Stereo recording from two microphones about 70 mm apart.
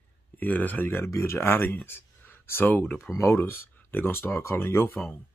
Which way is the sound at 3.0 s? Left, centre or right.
Left.